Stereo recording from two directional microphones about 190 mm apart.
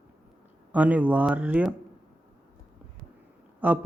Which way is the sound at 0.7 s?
10° right (ahead or behind).